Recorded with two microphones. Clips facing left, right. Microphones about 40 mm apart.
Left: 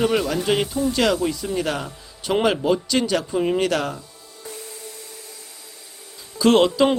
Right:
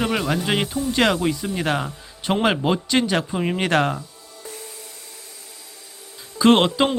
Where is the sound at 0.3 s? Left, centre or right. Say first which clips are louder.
Left 1 dB; right.